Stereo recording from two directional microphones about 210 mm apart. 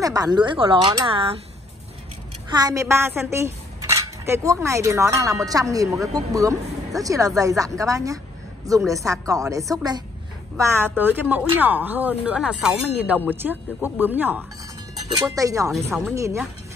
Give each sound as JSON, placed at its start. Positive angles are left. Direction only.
{"t": 0.0, "sound": "speech", "side_deg": -15}
{"t": 2.5, "sound": "speech", "side_deg": -15}
{"t": 15.9, "sound": "speech", "side_deg": -5}